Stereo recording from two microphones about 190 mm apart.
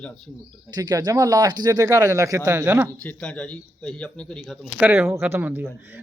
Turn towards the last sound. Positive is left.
turn(degrees=-10)  # may be behind; listen again after turning